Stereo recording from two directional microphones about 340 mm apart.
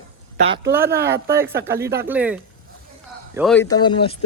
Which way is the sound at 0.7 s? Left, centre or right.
Centre.